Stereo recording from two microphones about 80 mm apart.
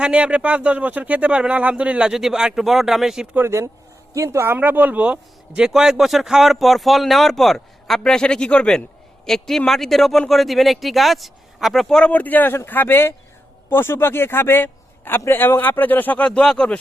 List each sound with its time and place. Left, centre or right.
0.0 s speech: centre
3.3 s speech: right; by 12.1 s centre
12.1 s a man's voice: left